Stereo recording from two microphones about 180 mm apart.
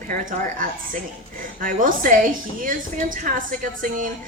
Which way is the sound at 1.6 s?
50° right (ahead or behind).